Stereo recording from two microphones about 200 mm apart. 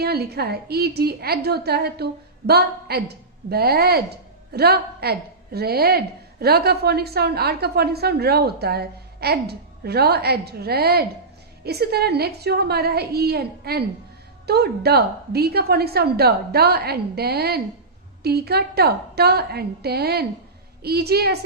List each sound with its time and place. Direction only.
0.0 s a woman's voice: 55° right (ahead or behind)